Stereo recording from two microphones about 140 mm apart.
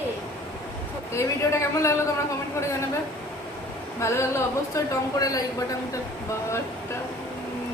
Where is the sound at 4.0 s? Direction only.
20° left (ahead or behind).